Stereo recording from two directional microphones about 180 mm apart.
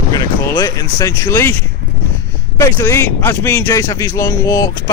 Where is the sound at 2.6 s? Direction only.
15° left (ahead or behind).